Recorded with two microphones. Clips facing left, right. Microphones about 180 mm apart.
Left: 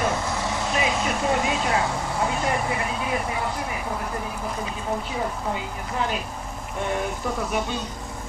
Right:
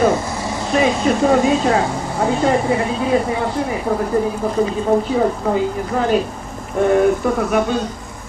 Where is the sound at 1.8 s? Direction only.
30° right (ahead or behind).